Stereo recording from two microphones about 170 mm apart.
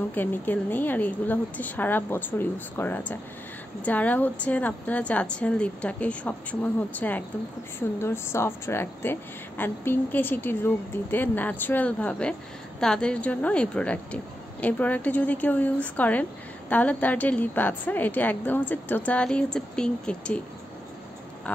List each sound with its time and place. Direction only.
0.1 s a woman's voice: 10° left (ahead or behind)